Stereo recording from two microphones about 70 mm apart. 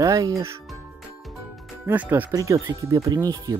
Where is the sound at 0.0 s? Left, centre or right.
Right.